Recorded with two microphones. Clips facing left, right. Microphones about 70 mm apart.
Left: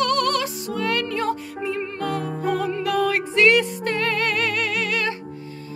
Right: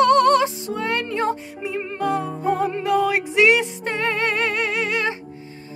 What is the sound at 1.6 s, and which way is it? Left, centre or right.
Music, centre.